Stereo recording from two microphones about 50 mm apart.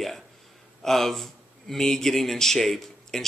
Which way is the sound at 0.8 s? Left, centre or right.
Centre.